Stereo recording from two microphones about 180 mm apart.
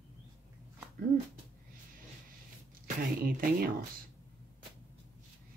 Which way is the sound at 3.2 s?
55° right (ahead or behind).